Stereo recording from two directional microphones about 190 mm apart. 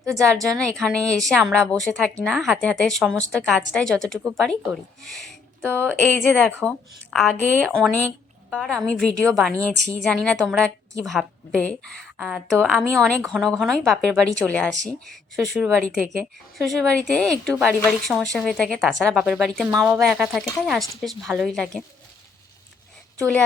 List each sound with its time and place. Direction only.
0.5 s speech: 5° left (ahead or behind)